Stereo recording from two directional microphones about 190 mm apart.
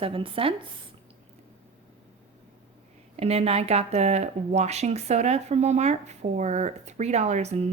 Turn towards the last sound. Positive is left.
turn(degrees=-35)  # may be behind; listen again after turning